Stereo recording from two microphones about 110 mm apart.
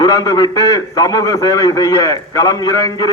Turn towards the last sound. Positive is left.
turn(degrees=35)  # may be behind; listen again after turning